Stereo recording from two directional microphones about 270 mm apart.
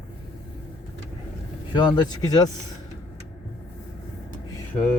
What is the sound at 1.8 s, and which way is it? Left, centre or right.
Speech, centre.